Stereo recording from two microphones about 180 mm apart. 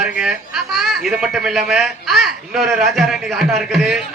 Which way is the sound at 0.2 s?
Centre (ahead or behind).